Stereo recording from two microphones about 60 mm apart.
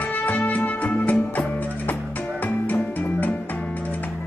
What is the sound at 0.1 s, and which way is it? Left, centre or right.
Music, left.